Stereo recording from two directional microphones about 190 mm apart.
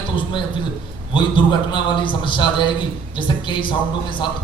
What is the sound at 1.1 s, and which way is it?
A man's voice, 25° left (ahead or behind).